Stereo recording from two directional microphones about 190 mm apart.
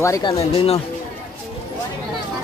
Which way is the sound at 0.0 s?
20° left (ahead or behind).